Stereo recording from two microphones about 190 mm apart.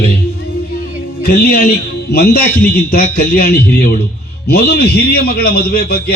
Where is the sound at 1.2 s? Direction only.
55° left (ahead or behind).